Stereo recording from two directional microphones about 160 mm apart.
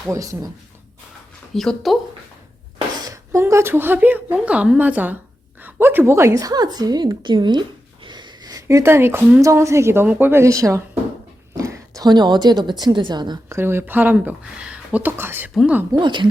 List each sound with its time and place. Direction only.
0.1 s a woman's voice: 20° right (ahead or behind)
1.5 s speech: centre (ahead or behind)
3.0 s a woman's voice: 20° right (ahead or behind)
11.5 s a sound: 20° right (ahead or behind)
12.8 s a woman's voice: 30° right (ahead or behind)
13.6 s speech: 15° right (ahead or behind)
15.9 s a woman's voice: 30° right (ahead or behind)